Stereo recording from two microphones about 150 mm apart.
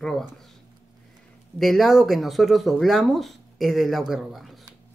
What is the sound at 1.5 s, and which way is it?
Speech, centre (ahead or behind).